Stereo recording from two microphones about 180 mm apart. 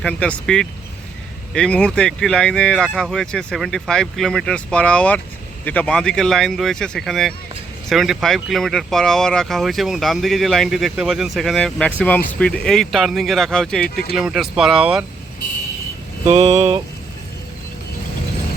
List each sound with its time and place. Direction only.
0.0 s speech: 5° left (ahead or behind)
13.8 s speech: 60° left (ahead or behind)
14.2 s speech: 5° right (ahead or behind)
16.2 s vehicle: 40° right (ahead or behind)